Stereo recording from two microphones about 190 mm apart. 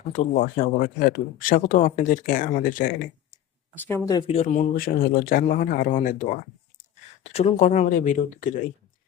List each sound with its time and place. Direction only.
0.1 s speech: 45° left (ahead or behind)
3.8 s speech: 10° left (ahead or behind)
4.3 s speech: 40° left (ahead or behind)
4.7 s speech: 50° left (ahead or behind)
7.3 s speech: 35° left (ahead or behind)